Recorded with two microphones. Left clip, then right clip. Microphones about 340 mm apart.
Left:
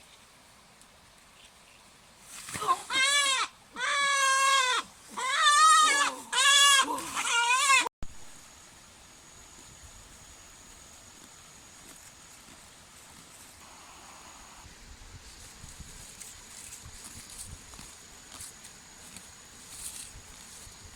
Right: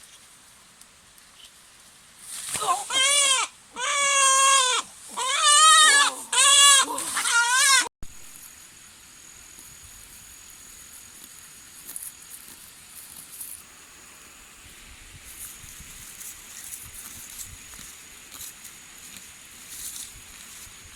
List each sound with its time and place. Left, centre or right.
2.5 s goat: centre